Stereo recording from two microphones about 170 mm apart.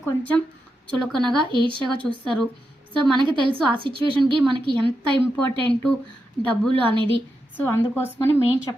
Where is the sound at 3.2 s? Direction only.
30° right (ahead or behind).